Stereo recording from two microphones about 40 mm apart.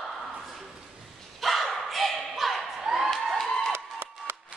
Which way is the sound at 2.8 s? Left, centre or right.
Centre.